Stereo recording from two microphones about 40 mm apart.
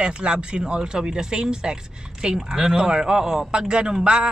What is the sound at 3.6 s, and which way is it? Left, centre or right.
Speech, right.